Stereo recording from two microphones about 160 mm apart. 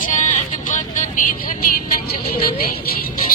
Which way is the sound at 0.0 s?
55° left (ahead or behind).